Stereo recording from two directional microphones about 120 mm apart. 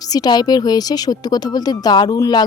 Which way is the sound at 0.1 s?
35° left (ahead or behind).